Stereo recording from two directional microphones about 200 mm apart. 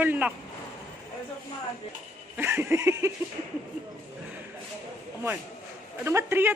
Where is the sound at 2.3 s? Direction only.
10° right (ahead or behind).